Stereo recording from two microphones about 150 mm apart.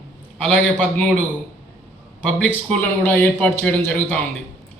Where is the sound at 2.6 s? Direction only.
10° left (ahead or behind).